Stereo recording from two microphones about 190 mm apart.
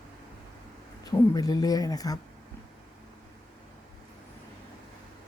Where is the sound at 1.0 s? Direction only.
20° left (ahead or behind).